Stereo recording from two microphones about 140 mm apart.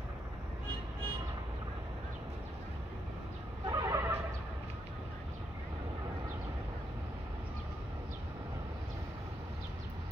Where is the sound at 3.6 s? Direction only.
20° right (ahead or behind).